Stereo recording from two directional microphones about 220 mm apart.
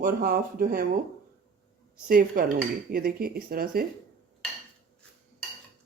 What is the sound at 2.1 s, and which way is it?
Speech, 45° right (ahead or behind).